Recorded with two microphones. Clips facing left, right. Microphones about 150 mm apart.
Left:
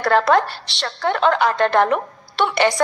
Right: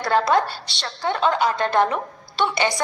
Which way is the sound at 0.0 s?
60° left (ahead or behind).